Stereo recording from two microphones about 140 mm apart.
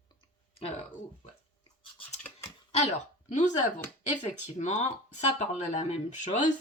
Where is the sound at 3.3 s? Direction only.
60° left (ahead or behind).